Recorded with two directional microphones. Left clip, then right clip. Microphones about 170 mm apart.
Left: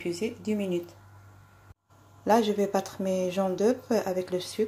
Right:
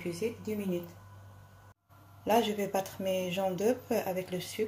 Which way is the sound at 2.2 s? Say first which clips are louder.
Left 5 dB; 25° left (ahead or behind).